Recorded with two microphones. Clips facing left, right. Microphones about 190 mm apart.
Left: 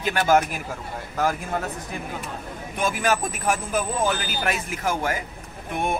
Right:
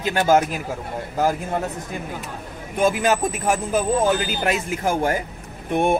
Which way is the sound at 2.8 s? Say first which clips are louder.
Right 5 dB; 25° right (ahead or behind).